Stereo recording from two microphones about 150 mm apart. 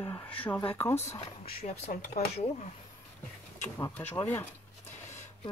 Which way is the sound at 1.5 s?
45° left (ahead or behind).